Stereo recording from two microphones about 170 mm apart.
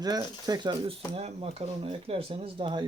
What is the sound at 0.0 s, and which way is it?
Speech, 25° right (ahead or behind).